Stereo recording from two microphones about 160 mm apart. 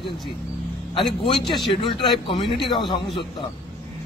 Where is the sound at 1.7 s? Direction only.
30° left (ahead or behind).